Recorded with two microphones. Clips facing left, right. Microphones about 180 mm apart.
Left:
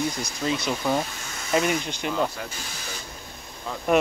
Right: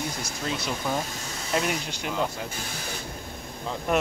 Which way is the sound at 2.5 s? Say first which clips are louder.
Right 3 dB; 55° right (ahead or behind).